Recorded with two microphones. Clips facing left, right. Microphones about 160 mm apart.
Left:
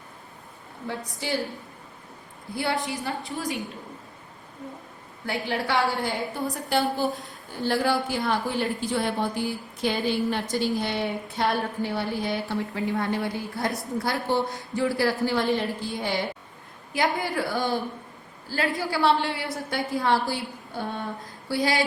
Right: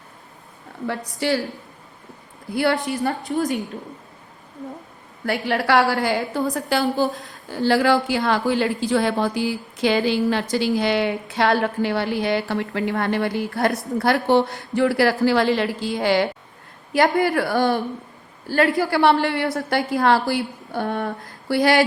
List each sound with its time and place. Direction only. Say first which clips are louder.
1.2 s a woman's voice: right 8 dB; 80° right
2.5 s a woman's voice: right 8 dB; 75° right (ahead or behind)
5.2 s a woman's voice: right 6 dB; 70° right (ahead or behind); by 16.2 s 90° right
16.9 s a woman's voice: right 8 dB; 65° right (ahead or behind)